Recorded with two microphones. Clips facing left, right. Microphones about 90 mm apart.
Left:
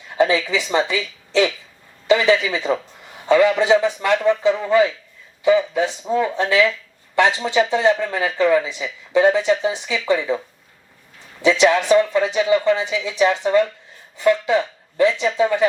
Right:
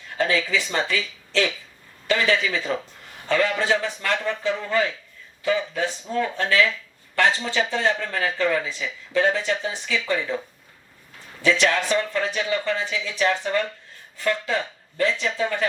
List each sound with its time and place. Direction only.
0.2 s speech: 20° left (ahead or behind)
11.4 s speech: 15° left (ahead or behind)